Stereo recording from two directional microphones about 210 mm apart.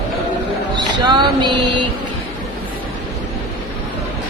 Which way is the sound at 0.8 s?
20° right (ahead or behind).